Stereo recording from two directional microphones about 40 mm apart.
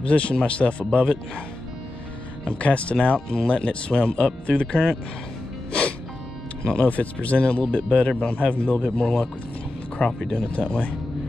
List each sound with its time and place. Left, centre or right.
0.0 s speech: left
2.4 s speech: left
5.7 s music: left
6.6 s speech: left
6.9 s speech: left